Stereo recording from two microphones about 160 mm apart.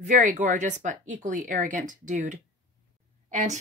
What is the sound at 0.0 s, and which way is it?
Speech, 50° right (ahead or behind).